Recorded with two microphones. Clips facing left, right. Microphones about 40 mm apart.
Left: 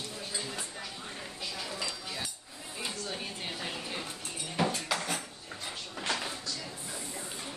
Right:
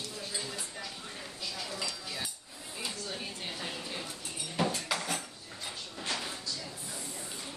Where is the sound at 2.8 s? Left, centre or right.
Centre.